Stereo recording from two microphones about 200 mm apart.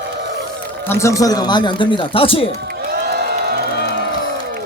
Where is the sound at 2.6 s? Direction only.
55° right (ahead or behind).